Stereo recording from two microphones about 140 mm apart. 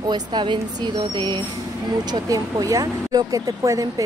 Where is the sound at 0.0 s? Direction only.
30° right (ahead or behind).